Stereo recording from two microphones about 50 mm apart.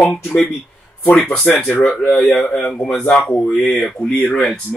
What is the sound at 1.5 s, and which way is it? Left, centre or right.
Speech, centre.